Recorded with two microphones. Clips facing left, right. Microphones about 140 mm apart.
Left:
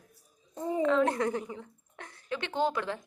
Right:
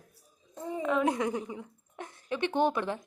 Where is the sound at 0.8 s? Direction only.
10° right (ahead or behind).